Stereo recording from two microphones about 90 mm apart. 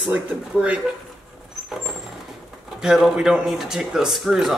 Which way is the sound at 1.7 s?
5° right (ahead or behind).